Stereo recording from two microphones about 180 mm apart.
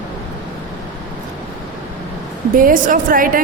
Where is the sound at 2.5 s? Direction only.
50° right (ahead or behind).